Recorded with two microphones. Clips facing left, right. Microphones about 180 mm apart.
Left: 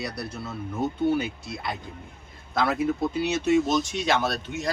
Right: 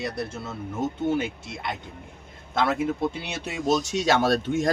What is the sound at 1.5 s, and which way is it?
Speech, 20° right (ahead or behind).